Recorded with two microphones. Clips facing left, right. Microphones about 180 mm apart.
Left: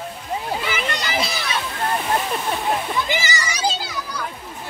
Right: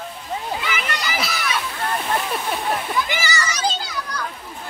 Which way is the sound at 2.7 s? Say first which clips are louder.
Left 1 dB; 20° left (ahead or behind).